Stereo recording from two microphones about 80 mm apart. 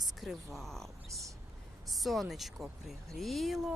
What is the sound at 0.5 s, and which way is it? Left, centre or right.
A woman's voice, centre.